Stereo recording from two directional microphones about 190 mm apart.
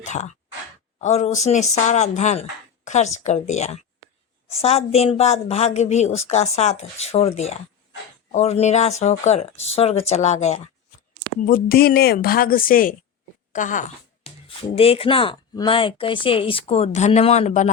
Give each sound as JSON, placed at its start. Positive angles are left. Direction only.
{"t": 0.0, "sound": "a woman's voice", "side_deg": 40}
{"t": 11.4, "sound": "a woman's voice", "side_deg": 50}
{"t": 13.5, "sound": "a sound", "side_deg": 40}
{"t": 14.8, "sound": "speech", "side_deg": 30}